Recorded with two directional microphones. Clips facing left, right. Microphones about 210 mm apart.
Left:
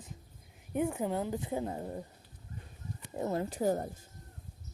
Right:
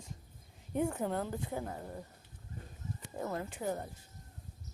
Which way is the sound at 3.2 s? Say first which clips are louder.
Left 5 dB; 25° left (ahead or behind).